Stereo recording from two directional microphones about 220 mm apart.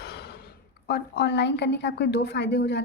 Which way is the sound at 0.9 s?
50° left (ahead or behind).